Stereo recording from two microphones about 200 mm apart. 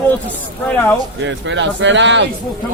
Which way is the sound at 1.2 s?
65° right (ahead or behind).